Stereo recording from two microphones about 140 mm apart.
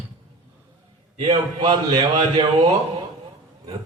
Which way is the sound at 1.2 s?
35° right (ahead or behind).